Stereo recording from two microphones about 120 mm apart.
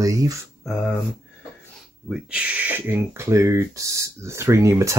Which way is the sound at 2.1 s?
10° right (ahead or behind).